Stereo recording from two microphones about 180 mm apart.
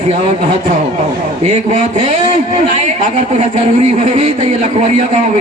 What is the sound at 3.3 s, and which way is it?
Speech, 35° right (ahead or behind).